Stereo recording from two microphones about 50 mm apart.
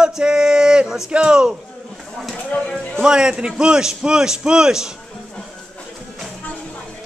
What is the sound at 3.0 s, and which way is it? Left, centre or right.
Speech, centre.